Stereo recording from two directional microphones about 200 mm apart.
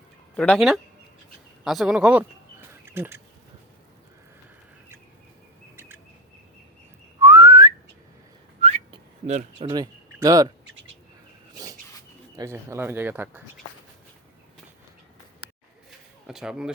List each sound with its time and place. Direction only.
0.3 s speech: centre (ahead or behind)
1.6 s a sound: centre (ahead or behind)
7.2 s whistling: 15° right (ahead or behind)
8.9 s speech: 30° right (ahead or behind)
11.5 s a sound: 20° right (ahead or behind)
12.4 s speech: 15° right (ahead or behind)
16.2 s speech: centre (ahead or behind)